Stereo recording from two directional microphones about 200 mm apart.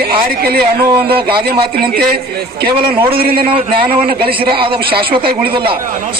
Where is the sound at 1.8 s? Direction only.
50° right (ahead or behind).